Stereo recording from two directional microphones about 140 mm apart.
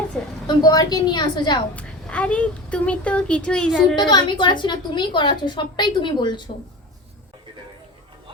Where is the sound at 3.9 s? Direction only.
30° left (ahead or behind).